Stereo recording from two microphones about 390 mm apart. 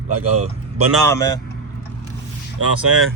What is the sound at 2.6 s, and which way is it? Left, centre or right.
Speech, right.